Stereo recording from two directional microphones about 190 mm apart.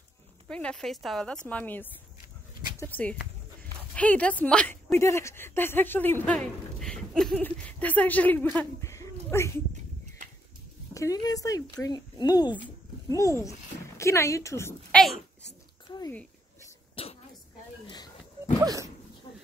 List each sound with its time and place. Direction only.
0.5 s a woman's voice: 5° left (ahead or behind)
10.9 s speech: 15° left (ahead or behind)
16.9 s throat clearing: 30° left (ahead or behind)
18.6 s speech: 20° right (ahead or behind)